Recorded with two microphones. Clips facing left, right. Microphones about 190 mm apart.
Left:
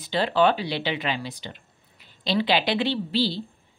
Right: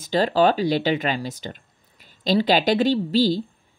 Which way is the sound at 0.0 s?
40° right (ahead or behind).